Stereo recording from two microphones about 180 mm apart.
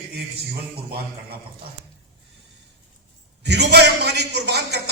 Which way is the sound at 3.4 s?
65° right (ahead or behind).